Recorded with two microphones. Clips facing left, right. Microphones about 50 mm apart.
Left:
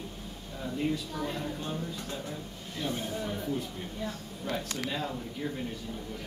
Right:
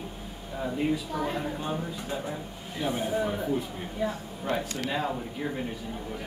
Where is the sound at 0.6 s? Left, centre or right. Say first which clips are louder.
Right 4 dB; right.